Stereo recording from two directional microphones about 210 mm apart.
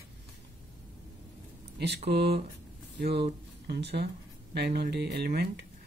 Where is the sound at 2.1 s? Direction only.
50° right (ahead or behind).